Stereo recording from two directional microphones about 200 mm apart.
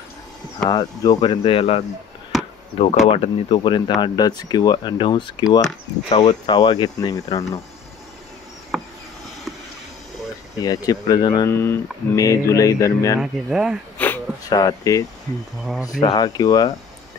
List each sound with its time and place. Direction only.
0.7 s speech: 20° left (ahead or behind)
3.1 s speech: 25° left (ahead or behind)
6.1 s speech: 30° left (ahead or behind)
6.5 s speech: 20° left (ahead or behind)
8.7 s a sound: centre (ahead or behind)
10.6 s speech: 20° left (ahead or behind)
13.2 s speech: 5° right (ahead or behind)
13.9 s a sound: 10° left (ahead or behind)
14.5 s speech: 20° left (ahead or behind)